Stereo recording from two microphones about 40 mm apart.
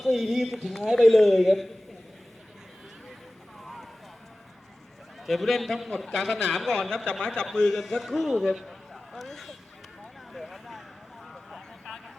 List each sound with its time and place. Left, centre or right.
0.0 s a man's voice: centre
5.2 s a man's voice: centre
6.9 s a man's voice: left
7.8 s speech: centre
8.6 s a sound: centre
10.3 s vehicle: centre